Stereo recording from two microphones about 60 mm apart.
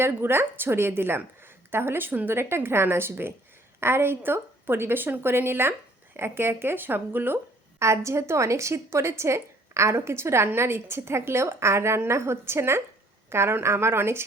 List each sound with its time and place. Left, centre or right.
0.0 s speech: right
7.8 s a woman's voice: right